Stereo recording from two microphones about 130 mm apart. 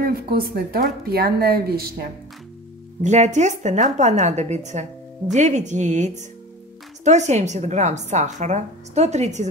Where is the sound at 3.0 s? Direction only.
65° right (ahead or behind).